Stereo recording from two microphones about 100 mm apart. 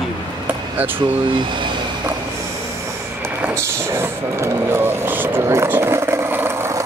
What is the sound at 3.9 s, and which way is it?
Vehicle, 25° right (ahead or behind).